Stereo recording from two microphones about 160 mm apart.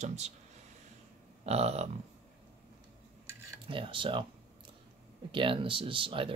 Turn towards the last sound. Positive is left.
turn(degrees=-35)  # may be behind; listen again after turning